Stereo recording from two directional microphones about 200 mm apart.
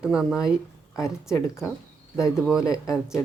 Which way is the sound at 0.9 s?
15° left (ahead or behind).